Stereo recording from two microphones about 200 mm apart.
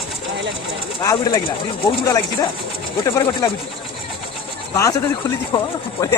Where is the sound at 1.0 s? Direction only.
15° left (ahead or behind).